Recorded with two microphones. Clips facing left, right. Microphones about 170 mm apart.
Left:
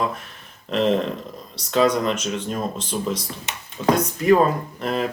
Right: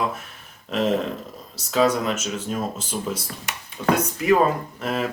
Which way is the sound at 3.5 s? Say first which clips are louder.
Right 1 dB; 25° left (ahead or behind).